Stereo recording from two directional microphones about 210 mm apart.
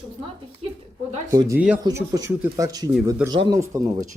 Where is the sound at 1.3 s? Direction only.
20° right (ahead or behind).